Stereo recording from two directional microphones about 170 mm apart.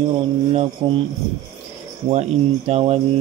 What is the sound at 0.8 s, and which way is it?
Speech, 30° right (ahead or behind).